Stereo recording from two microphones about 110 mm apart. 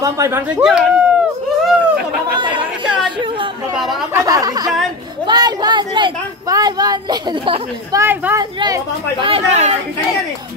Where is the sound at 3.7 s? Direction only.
Centre (ahead or behind).